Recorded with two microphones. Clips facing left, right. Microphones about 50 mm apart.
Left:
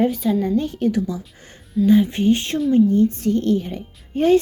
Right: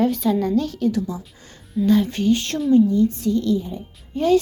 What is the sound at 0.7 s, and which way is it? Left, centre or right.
Speech, left.